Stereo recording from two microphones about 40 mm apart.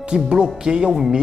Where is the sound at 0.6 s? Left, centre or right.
Centre.